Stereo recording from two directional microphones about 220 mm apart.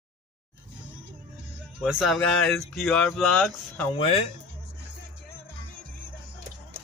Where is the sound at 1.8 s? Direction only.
Centre (ahead or behind).